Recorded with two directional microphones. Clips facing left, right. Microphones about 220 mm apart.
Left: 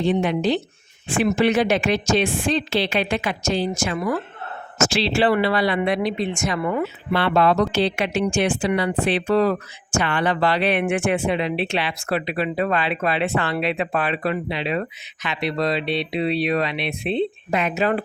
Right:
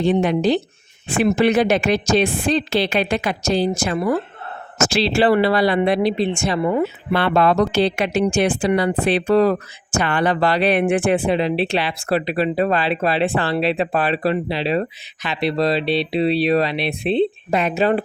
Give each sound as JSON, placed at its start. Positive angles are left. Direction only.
{"t": 0.0, "sound": "speech", "side_deg": -40}
{"t": 7.1, "sound": "speech", "side_deg": -45}